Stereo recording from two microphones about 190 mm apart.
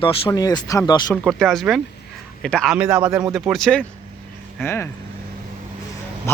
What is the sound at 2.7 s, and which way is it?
Speech, 10° right (ahead or behind).